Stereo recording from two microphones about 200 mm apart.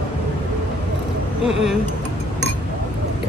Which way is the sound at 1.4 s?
Centre (ahead or behind).